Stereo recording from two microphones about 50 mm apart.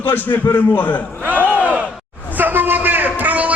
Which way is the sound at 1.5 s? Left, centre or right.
Right.